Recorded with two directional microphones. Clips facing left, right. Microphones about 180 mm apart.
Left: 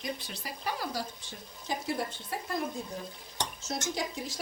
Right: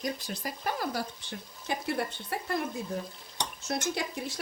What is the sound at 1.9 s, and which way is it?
A woman's voice, 60° right (ahead or behind).